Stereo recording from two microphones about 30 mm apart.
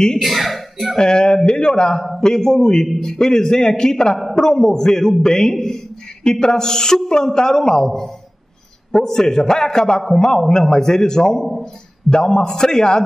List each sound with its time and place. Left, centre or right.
0.2 s speech: centre
0.9 s a man's voice: left